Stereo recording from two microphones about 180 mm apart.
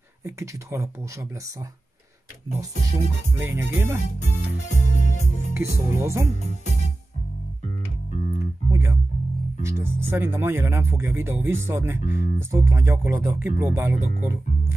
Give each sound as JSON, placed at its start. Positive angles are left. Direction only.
{"t": 0.2, "sound": "speech", "side_deg": -15}
{"t": 3.3, "sound": "speech", "side_deg": -15}
{"t": 4.7, "sound": "music", "side_deg": 40}
{"t": 5.5, "sound": "speech", "side_deg": -15}
{"t": 8.1, "sound": "music", "side_deg": 40}
{"t": 9.6, "sound": "speech", "side_deg": -15}
{"t": 12.1, "sound": "speech", "side_deg": 50}
{"t": 12.4, "sound": "speech", "side_deg": -15}